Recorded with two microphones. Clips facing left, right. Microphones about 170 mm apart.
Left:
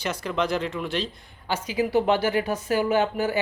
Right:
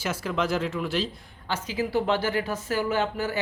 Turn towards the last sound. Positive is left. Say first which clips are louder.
# left 4 dB
turn(degrees=15)  # may be behind; listen again after turning